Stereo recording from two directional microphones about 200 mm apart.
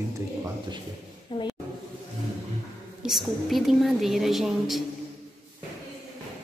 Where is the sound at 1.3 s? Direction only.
25° left (ahead or behind).